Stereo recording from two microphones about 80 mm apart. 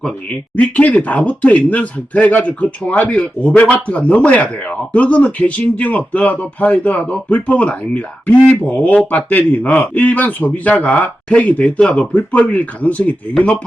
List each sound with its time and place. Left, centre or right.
0.5 s speech: centre